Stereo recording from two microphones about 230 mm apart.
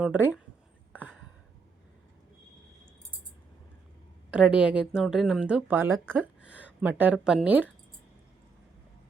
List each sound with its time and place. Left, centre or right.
0.0 s speech: centre
0.9 s a sound: centre
4.3 s speech: centre